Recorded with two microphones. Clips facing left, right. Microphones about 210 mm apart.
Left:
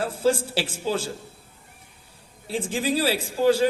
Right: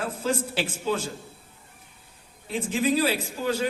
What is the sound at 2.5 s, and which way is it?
A man's voice, 30° left (ahead or behind).